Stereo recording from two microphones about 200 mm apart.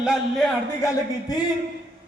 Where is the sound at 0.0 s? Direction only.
5° right (ahead or behind).